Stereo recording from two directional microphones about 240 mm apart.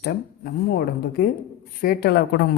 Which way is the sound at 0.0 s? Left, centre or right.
Left.